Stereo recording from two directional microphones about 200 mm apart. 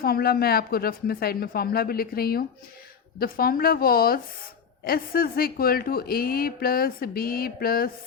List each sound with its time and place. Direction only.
0.0 s a man's voice: 50° left (ahead or behind)